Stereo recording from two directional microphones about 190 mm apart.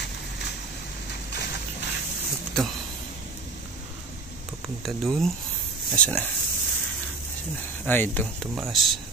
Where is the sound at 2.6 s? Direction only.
Centre (ahead or behind).